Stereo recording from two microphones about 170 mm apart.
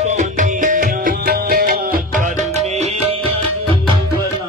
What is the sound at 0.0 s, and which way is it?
Music, 45° right (ahead or behind).